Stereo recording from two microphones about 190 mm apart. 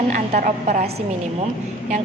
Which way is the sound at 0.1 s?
40° right (ahead or behind).